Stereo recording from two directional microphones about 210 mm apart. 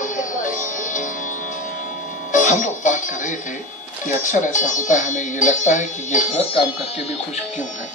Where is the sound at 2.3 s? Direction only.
35° left (ahead or behind).